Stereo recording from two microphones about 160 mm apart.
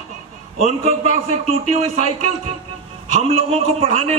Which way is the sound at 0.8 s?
40° right (ahead or behind).